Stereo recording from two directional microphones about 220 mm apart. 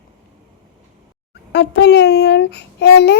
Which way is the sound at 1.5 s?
50° left (ahead or behind).